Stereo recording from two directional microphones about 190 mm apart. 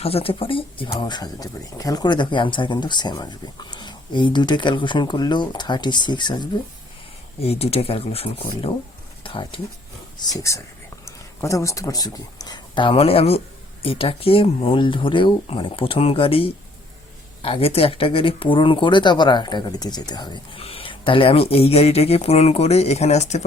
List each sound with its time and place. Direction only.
0.0 s speech: 30° left (ahead or behind)